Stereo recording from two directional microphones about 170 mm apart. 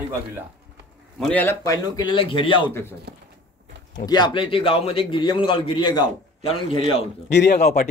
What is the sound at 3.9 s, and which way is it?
A man's voice, 25° left (ahead or behind).